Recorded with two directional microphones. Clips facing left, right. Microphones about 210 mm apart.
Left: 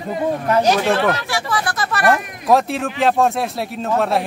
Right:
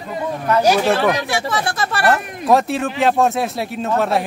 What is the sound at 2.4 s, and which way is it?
Speech, centre (ahead or behind).